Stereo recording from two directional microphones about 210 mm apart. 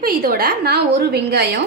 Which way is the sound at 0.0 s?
45° right (ahead or behind).